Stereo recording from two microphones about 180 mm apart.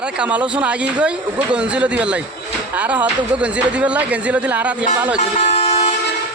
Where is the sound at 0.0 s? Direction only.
5° right (ahead or behind).